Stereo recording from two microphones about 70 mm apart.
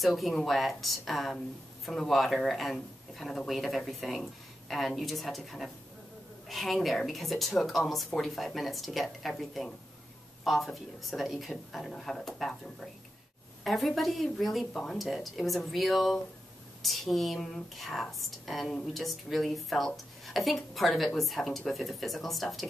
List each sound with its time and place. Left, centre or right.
0.0 s speech: centre